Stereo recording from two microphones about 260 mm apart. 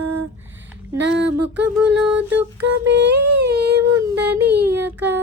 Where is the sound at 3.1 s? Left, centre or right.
Right.